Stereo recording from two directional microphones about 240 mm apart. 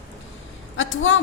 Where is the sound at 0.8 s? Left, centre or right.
Left.